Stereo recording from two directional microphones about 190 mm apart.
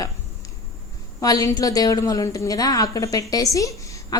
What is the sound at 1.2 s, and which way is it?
A woman's voice, 20° left (ahead or behind).